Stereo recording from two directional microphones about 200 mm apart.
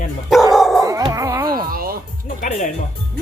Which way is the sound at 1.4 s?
45° right (ahead or behind).